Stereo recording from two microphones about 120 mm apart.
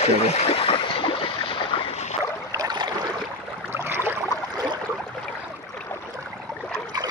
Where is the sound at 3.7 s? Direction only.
20° right (ahead or behind).